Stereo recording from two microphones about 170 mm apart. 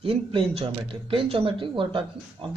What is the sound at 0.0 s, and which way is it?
Speech, 30° right (ahead or behind).